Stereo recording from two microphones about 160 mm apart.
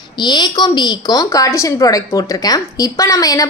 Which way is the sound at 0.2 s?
25° left (ahead or behind).